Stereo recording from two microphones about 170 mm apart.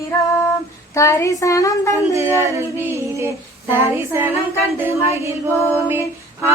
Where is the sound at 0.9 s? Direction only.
15° left (ahead or behind).